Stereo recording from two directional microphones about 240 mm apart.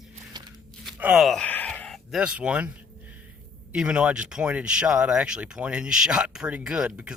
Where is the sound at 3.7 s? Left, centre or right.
Centre.